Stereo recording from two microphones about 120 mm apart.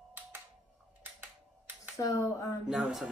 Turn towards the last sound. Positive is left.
turn(degrees=-5)  # may be behind; listen again after turning